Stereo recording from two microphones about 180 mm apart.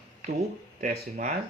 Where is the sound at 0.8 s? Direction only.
45° right (ahead or behind).